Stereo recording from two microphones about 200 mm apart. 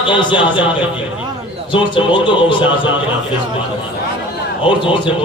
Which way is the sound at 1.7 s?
25° left (ahead or behind).